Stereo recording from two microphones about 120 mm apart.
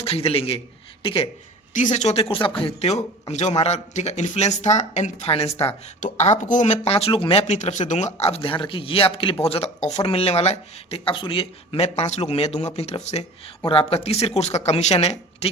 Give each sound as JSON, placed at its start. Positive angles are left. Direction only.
{"t": 0.0, "sound": "speech", "side_deg": 55}
{"t": 1.7, "sound": "a man's voice", "side_deg": 85}
{"t": 5.2, "sound": "speech", "side_deg": 55}
{"t": 6.0, "sound": "a woman's voice", "side_deg": 80}
{"t": 6.9, "sound": "speech", "side_deg": 50}
{"t": 7.5, "sound": "speech", "side_deg": 80}
{"t": 13.7, "sound": "speech", "side_deg": 50}